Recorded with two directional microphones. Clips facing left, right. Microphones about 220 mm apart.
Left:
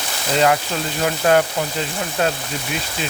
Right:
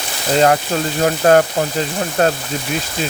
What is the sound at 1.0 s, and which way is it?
Speech, 45° right (ahead or behind).